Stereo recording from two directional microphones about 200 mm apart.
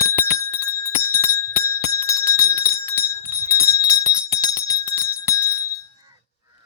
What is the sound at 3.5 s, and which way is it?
Bell, 15° left (ahead or behind).